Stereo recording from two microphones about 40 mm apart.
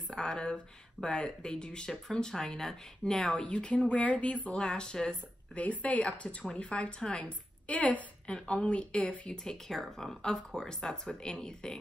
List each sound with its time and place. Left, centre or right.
0.1 s speech: centre
3.3 s speech: left
4.6 s speech: left
5.6 s a woman's voice: left
9.3 s speech: centre